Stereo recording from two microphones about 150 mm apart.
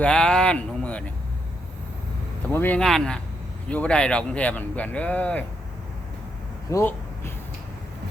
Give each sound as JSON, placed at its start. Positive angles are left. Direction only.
{"t": 0.0, "sound": "speech", "side_deg": 5}
{"t": 2.5, "sound": "speech", "side_deg": 10}
{"t": 6.7, "sound": "a sound", "side_deg": 20}